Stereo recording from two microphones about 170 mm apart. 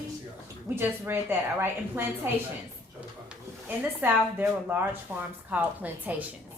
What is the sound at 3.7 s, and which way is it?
A woman's voice, 15° right (ahead or behind).